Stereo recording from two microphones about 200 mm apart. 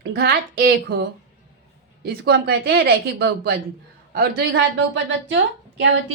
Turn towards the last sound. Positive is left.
turn(degrees=-65)  # may be behind; listen again after turning